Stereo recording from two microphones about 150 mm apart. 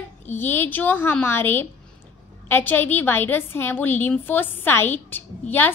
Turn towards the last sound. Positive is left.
turn(degrees=15)  # may be behind; listen again after turning